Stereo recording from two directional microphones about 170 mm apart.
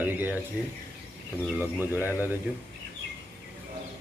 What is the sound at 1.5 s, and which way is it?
Speech, 10° right (ahead or behind).